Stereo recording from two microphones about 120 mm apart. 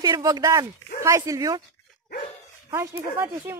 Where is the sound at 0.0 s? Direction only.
30° right (ahead or behind).